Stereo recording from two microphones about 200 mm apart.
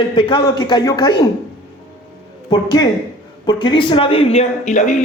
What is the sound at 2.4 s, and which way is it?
Speech, 20° left (ahead or behind).